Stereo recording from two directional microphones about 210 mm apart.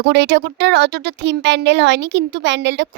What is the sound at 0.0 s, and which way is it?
Speech, 55° right (ahead or behind).